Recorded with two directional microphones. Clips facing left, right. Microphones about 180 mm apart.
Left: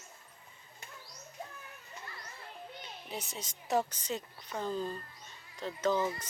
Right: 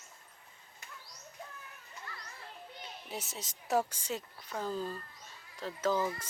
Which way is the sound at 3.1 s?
5° right (ahead or behind).